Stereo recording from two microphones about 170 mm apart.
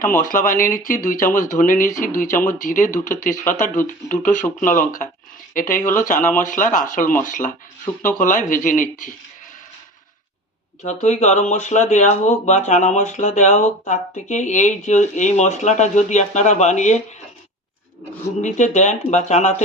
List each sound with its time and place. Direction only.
0.0 s speech: 50° left (ahead or behind)
10.8 s speech: 40° left (ahead or behind)
18.4 s speech: 45° left (ahead or behind)